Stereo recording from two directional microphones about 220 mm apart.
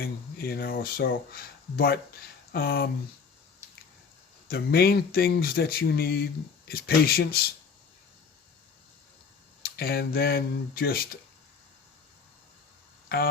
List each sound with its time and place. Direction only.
0.0 s speech: 45° left (ahead or behind)
4.4 s speech: 45° left (ahead or behind)
9.6 s speech: 45° left (ahead or behind)